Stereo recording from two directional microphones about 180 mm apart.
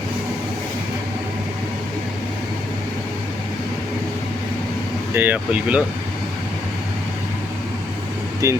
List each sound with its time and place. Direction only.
5.1 s speech: 10° right (ahead or behind)
8.4 s speech: 15° right (ahead or behind)